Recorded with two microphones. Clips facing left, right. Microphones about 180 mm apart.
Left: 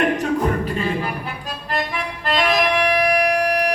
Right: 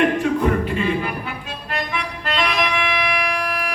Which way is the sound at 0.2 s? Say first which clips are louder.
Right 1 dB; 40° left (ahead or behind).